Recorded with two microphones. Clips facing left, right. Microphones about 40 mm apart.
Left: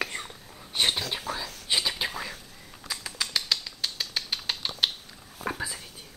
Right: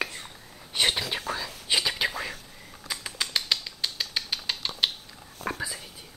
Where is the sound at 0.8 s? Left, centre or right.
Centre.